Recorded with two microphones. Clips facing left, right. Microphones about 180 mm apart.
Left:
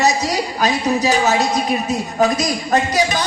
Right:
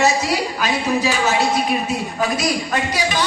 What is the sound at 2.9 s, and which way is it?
Speech, 45° left (ahead or behind).